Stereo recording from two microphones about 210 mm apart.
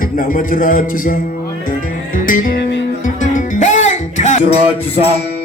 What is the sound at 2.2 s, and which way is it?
Music, 40° left (ahead or behind).